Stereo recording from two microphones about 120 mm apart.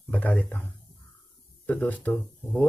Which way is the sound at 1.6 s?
15° left (ahead or behind).